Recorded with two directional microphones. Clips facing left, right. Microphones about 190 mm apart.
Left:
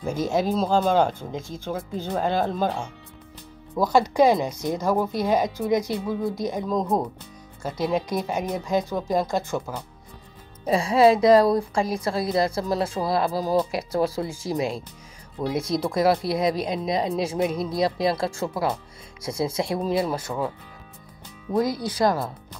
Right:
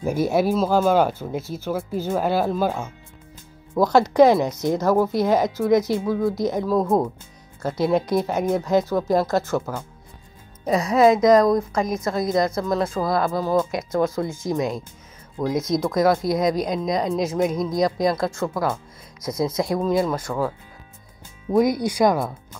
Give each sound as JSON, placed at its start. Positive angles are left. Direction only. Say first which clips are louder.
{"t": 0.0, "sound": "speech", "louder": "right 4 dB", "side_deg": -10}
{"t": 3.8, "sound": "speech", "louder": "right 4 dB", "side_deg": 10}
{"t": 6.7, "sound": "speech", "louder": "right 4 dB", "side_deg": -5}
{"t": 7.6, "sound": "speech", "louder": "right 4 dB", "side_deg": 10}
{"t": 10.7, "sound": "speech", "louder": "right 1 dB", "side_deg": 30}
{"t": 21.5, "sound": "speech", "louder": "right 5 dB", "side_deg": -15}